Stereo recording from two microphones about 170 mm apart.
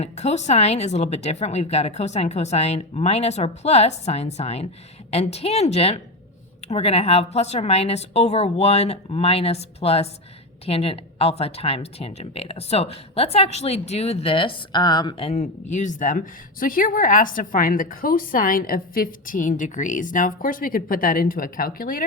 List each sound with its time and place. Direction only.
0.0 s speech: 40° left (ahead or behind)
15.3 s speech: 45° left (ahead or behind)